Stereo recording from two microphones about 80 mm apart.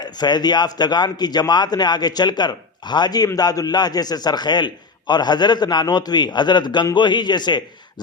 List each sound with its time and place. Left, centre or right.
0.0 s a man's voice: left